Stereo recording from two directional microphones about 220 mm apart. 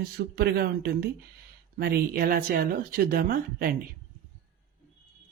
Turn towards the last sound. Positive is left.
turn(degrees=-40)  # may be behind; listen again after turning